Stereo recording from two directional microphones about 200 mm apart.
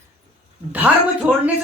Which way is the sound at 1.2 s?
5° right (ahead or behind).